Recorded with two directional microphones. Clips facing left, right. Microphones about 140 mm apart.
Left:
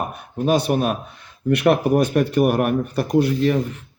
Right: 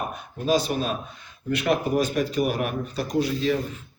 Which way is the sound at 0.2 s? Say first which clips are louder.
Left 4 dB; 60° left (ahead or behind).